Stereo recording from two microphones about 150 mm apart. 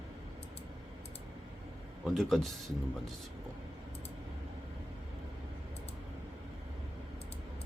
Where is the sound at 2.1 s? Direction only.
Centre (ahead or behind).